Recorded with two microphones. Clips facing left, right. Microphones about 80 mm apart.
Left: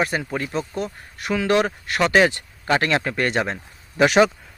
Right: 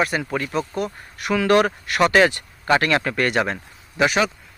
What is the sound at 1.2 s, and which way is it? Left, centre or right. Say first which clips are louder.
Speech: right 2 dB; left.